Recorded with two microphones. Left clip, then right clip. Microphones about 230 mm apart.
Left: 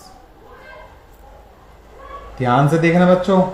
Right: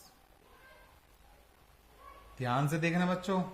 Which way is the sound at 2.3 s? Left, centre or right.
Right.